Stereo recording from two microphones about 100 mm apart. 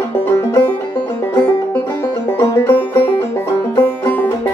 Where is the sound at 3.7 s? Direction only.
20° left (ahead or behind).